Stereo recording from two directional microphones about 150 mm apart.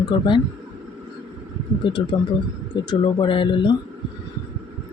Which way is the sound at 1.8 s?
35° left (ahead or behind).